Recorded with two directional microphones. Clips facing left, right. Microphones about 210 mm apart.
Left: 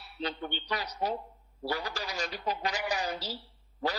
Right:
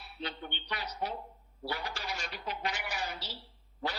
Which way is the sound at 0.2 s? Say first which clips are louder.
Left 6 dB; 40° left (ahead or behind).